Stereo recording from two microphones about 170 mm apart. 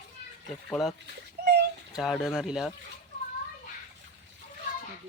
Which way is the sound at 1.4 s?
70° right (ahead or behind).